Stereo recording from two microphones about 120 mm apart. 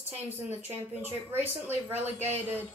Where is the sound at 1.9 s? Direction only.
15° right (ahead or behind).